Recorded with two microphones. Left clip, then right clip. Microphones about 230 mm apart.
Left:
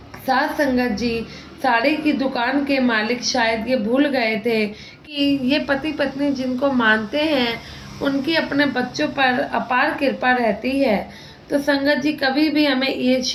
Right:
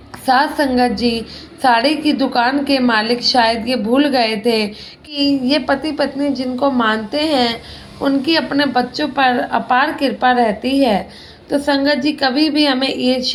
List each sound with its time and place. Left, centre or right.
0.3 s a woman's voice: right